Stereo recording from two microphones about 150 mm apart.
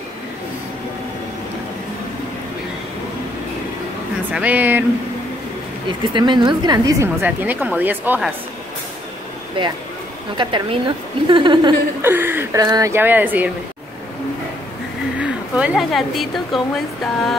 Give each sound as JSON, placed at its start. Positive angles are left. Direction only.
{"t": 4.3, "sound": "a woman's voice", "side_deg": -10}
{"t": 5.9, "sound": "a woman's voice", "side_deg": -30}
{"t": 9.6, "sound": "a woman's voice", "side_deg": -35}
{"t": 12.0, "sound": "a woman's voice", "side_deg": -15}
{"t": 12.6, "sound": "speech", "side_deg": -25}
{"t": 12.9, "sound": "a woman's voice", "side_deg": -10}
{"t": 15.1, "sound": "speech", "side_deg": -5}